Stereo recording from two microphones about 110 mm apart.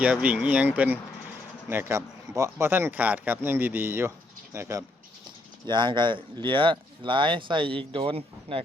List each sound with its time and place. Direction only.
0.0 s speech: 10° right (ahead or behind)
5.6 s speech: 45° right (ahead or behind)